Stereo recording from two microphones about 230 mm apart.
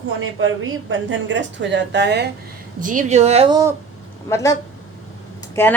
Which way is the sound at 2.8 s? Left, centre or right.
Right.